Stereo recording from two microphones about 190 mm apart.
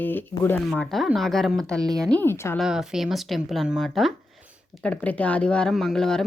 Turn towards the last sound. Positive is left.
turn(degrees=5)  # may be behind; listen again after turning